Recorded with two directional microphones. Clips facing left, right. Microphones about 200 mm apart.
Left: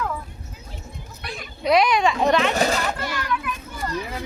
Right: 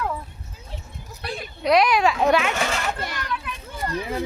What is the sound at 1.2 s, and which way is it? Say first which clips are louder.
Children playing: right 4 dB; 30° right (ahead or behind).